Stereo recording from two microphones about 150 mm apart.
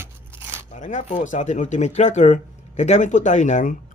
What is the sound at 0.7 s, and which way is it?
Speech, 55° left (ahead or behind).